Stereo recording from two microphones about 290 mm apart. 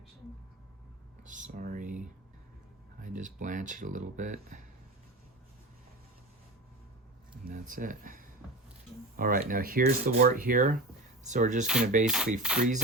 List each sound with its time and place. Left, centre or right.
1.2 s speech: right
3.0 s speech: right
7.4 s speech: right
11.6 s dishes: centre